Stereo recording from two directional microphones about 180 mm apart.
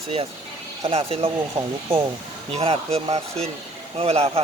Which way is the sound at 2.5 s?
35° right (ahead or behind).